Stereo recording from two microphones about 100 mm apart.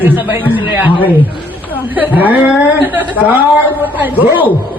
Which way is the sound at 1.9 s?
15° right (ahead or behind).